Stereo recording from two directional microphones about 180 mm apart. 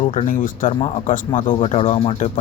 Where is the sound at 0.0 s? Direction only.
35° left (ahead or behind).